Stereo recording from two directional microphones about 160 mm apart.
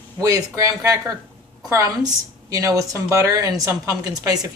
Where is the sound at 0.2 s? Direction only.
20° right (ahead or behind).